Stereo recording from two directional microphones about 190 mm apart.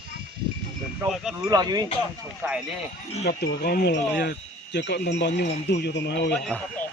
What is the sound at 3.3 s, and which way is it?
Speech, 55° left (ahead or behind).